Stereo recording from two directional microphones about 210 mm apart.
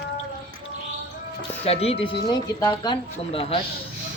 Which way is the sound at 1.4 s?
30° left (ahead or behind).